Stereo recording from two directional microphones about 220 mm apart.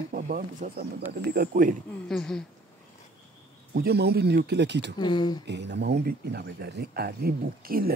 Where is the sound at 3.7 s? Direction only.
45° right (ahead or behind).